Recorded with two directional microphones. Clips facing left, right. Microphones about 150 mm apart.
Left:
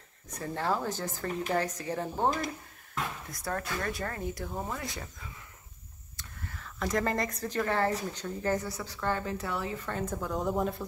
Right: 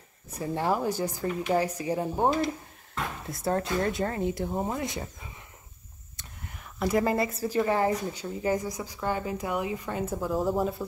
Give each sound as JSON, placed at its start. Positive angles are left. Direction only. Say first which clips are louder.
{"t": 0.3, "sound": "speech", "louder": "right 4 dB", "side_deg": -15}
{"t": 3.3, "sound": "speech", "louder": "right 7 dB", "side_deg": -25}